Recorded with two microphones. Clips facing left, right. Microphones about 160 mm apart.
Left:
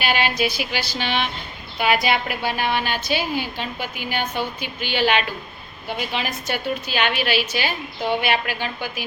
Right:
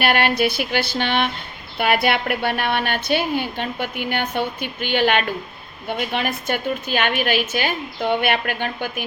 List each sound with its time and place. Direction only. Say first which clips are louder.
0.0 s a woman's voice: right 3 dB; 60° right (ahead or behind)